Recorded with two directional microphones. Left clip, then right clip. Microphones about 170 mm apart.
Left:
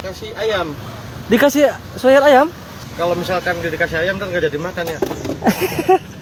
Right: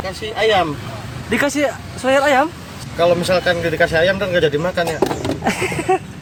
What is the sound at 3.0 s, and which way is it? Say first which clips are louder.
Speech: right 4 dB; 75° right (ahead or behind).